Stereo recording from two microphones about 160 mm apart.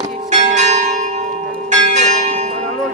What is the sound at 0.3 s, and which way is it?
Church bell, 45° right (ahead or behind).